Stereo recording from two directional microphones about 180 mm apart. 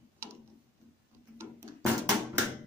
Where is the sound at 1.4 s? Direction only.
15° right (ahead or behind).